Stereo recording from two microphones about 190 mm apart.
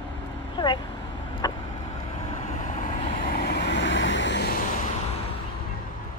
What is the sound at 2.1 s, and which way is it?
Vehicle, 35° left (ahead or behind).